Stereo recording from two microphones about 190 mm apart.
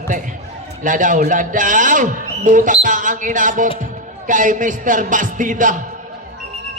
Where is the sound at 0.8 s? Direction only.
45° right (ahead or behind).